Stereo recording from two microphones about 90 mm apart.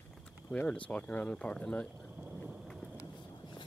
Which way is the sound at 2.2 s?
15° right (ahead or behind).